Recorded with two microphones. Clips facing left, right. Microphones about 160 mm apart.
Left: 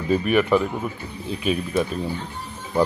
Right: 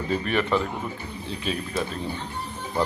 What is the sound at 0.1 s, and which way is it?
Speech, 10° left (ahead or behind).